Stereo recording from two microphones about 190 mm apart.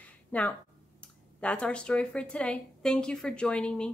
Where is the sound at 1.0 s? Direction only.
5° left (ahead or behind).